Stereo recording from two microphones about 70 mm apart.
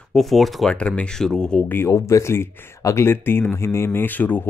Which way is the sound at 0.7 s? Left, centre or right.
Centre.